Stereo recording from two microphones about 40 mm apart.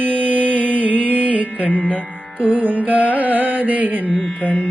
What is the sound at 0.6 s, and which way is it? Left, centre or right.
Music, right.